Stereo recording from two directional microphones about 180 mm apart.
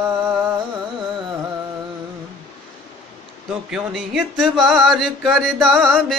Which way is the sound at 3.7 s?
5° right (ahead or behind).